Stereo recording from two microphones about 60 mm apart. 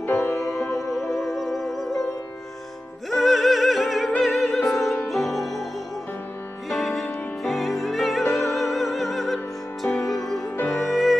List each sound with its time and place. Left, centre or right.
0.0 s music: left
1.1 s music: centre
3.1 s music: centre
4.2 s opera: centre
5.1 s music: centre
6.7 s music: centre